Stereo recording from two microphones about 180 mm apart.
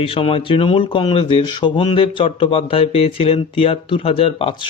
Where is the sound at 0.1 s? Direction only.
30° left (ahead or behind).